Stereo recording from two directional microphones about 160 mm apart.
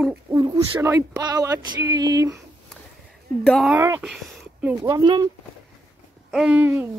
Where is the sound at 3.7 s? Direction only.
15° right (ahead or behind).